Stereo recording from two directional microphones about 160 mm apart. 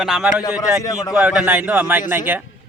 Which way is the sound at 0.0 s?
5° right (ahead or behind).